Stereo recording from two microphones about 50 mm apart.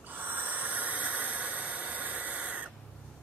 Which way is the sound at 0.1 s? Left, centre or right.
Right.